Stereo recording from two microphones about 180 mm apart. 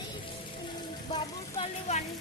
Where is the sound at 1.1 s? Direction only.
30° left (ahead or behind).